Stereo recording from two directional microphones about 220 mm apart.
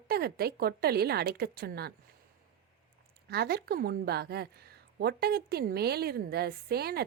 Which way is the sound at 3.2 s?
45° right (ahead or behind).